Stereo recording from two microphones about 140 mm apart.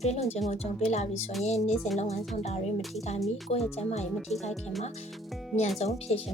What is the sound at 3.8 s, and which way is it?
Speech, 50° left (ahead or behind).